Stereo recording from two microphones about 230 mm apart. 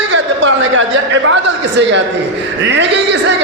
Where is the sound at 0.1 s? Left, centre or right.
Right.